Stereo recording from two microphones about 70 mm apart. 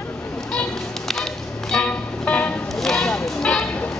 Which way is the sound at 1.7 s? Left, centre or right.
Centre.